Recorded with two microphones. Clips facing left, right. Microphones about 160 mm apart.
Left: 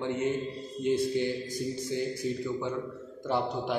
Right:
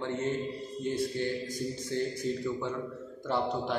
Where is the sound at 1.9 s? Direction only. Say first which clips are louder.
Right 1 dB; 10° left (ahead or behind).